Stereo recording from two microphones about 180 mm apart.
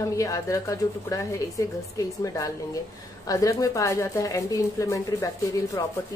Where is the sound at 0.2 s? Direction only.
15° left (ahead or behind).